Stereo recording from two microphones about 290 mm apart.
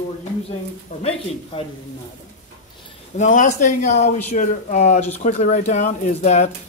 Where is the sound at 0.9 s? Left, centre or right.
Left.